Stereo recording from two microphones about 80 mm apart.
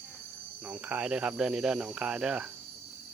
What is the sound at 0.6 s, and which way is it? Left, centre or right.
Speech, centre.